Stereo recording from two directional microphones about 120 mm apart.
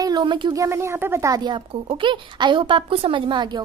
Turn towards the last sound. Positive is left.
turn(degrees=-40)  # may be behind; listen again after turning